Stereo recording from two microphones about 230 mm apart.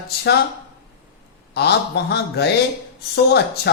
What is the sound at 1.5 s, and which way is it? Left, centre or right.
Speech, left.